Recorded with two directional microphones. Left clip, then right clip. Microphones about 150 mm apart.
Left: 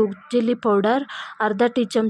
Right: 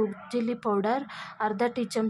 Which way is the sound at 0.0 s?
30° left (ahead or behind).